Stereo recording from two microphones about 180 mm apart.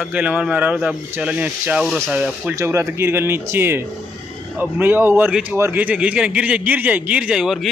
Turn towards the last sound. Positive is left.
turn(degrees=0)  # may be behind; listen again after turning